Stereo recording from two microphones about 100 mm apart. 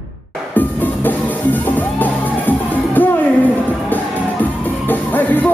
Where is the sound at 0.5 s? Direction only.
15° left (ahead or behind).